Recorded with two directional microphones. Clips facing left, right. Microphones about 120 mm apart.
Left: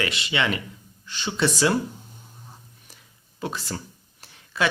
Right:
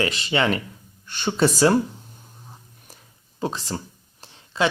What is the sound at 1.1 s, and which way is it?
Speech, 50° right (ahead or behind).